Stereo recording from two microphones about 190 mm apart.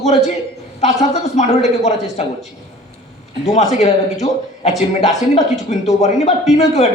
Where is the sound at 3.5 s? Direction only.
35° left (ahead or behind).